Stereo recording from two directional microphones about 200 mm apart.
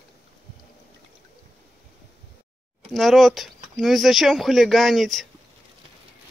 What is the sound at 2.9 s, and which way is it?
Speech, centre (ahead or behind).